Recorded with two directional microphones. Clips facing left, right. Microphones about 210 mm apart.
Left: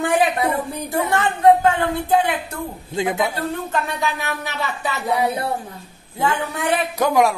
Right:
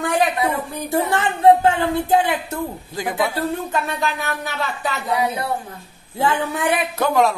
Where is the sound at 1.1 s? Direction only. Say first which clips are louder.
Even; 25° right (ahead or behind).